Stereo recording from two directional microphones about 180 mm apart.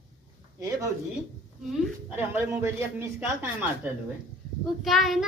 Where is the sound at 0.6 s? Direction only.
15° right (ahead or behind).